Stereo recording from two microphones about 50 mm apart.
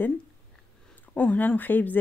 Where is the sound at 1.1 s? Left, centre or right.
Left.